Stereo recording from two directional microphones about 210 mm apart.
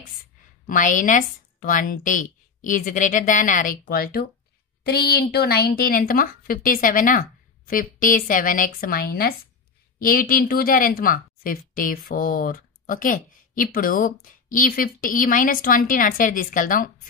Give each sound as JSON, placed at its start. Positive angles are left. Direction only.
{"t": 0.7, "sound": "a woman's voice", "side_deg": 40}